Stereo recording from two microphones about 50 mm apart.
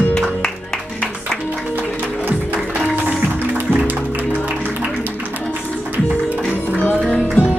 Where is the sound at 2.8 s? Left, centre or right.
Right.